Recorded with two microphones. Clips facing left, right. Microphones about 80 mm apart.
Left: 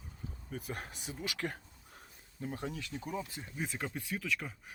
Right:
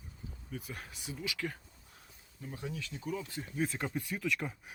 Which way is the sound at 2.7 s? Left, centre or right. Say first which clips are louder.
Even; left.